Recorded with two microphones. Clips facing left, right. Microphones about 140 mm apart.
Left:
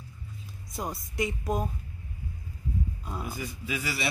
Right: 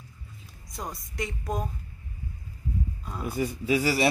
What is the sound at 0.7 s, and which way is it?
Speech, 5° left (ahead or behind).